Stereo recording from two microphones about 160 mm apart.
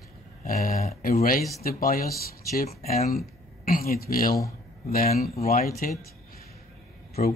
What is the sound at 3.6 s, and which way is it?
Speech, 65° left (ahead or behind).